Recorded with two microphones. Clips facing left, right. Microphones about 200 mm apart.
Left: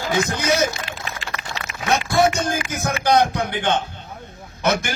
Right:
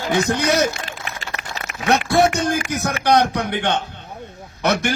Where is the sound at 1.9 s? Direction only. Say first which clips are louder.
Right 3 dB; 65° right (ahead or behind).